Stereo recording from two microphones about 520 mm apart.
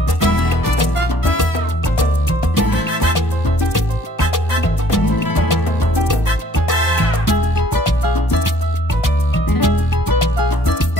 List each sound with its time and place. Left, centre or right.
0.2 s music: left
2.5 s music: left
7.2 s music: left
9.5 s music: left